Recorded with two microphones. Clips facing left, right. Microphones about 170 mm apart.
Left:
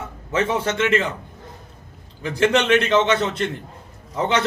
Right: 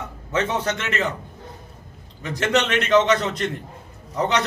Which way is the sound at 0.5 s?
30° left (ahead or behind).